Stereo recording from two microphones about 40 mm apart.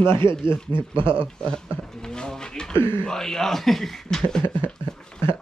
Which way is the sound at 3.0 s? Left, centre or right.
Centre.